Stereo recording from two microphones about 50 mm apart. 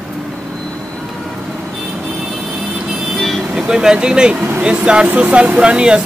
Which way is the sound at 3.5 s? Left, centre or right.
Centre.